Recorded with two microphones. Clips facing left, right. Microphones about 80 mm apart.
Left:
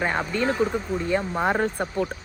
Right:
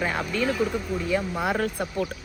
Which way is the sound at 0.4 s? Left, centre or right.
Left.